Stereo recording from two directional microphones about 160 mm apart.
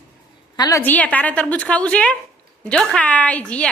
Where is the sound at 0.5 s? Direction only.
25° left (ahead or behind).